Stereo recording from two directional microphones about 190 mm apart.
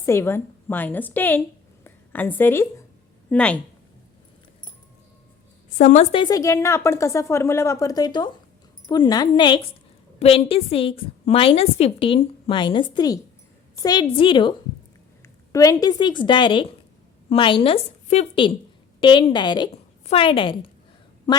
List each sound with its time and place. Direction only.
0.0 s a woman's voice: 15° left (ahead or behind)
5.7 s a woman's voice: 40° left (ahead or behind)
15.5 s a woman's voice: 20° left (ahead or behind)